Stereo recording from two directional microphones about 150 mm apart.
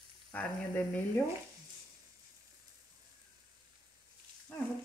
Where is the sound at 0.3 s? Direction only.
10° left (ahead or behind).